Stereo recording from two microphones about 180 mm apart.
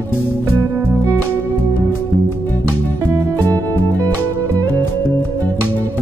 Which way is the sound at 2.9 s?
15° right (ahead or behind).